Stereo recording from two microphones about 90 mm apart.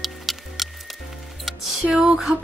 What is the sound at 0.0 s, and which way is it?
Music, centre (ahead or behind).